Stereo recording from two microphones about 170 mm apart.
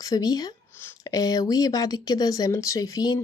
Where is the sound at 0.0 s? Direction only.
20° left (ahead or behind).